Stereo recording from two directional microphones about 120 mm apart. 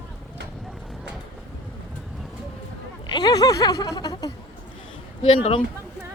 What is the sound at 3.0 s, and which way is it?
Speech, 35° left (ahead or behind).